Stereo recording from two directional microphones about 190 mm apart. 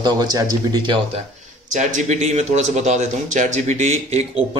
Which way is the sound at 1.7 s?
40° right (ahead or behind).